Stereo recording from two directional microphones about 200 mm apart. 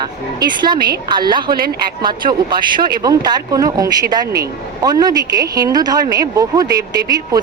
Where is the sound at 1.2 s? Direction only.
20° right (ahead or behind).